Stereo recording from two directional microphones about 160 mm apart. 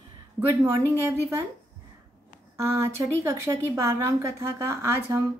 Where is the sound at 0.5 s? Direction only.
15° right (ahead or behind).